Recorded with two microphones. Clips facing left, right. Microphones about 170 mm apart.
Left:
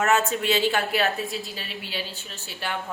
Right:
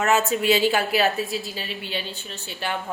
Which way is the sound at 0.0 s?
Centre (ahead or behind).